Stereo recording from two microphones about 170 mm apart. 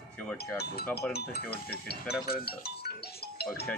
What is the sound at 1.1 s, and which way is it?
Speech, 70° left (ahead or behind).